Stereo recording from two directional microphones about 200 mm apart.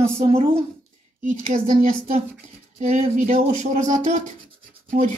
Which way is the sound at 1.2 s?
40° right (ahead or behind).